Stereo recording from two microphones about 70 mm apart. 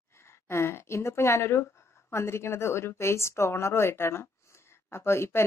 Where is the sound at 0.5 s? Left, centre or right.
Left.